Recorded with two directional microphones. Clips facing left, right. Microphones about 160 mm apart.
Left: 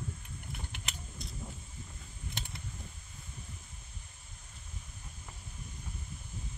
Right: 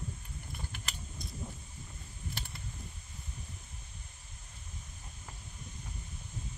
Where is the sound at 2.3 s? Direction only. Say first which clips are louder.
Even; 20° left (ahead or behind).